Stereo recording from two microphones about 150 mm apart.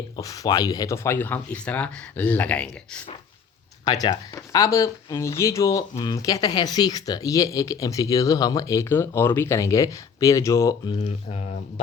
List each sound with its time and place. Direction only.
0.2 s speech: 25° left (ahead or behind)
3.9 s speech: 25° left (ahead or behind)
10.9 s speech: 45° left (ahead or behind)